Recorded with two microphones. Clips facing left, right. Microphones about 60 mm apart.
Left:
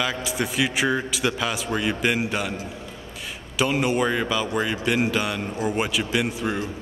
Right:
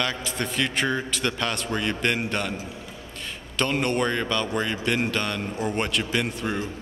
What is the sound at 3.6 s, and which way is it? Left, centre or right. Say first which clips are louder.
Speech: left 2 dB; centre.